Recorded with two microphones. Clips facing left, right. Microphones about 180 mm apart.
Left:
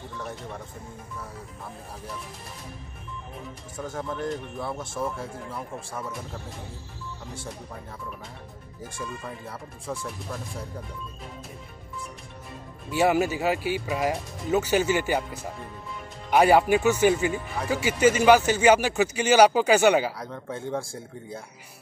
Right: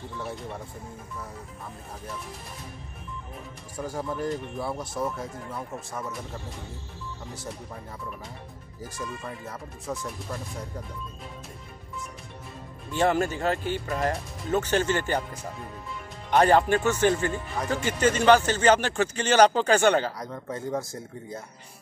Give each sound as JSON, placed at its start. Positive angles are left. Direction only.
{"t": 3.8, "sound": "speech", "side_deg": -10}
{"t": 9.0, "sound": "speech", "side_deg": 0}
{"t": 12.9, "sound": "speech", "side_deg": 10}
{"t": 16.3, "sound": "speech", "side_deg": 10}
{"t": 20.2, "sound": "speech", "side_deg": 0}